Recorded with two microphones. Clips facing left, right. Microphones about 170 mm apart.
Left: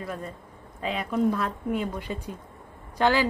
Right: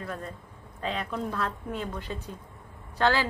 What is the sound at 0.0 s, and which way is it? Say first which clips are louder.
A woman's voice: left 2 dB; 10° left (ahead or behind).